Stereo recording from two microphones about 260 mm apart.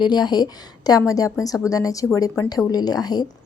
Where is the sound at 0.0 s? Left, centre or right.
Centre.